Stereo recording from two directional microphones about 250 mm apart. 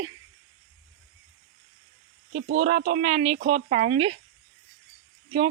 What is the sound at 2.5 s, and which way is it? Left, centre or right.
Speech, right.